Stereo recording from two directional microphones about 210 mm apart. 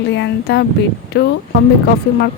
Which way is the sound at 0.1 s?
55° left (ahead or behind).